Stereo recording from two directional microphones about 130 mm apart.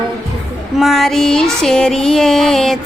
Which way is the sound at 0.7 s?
Centre (ahead or behind).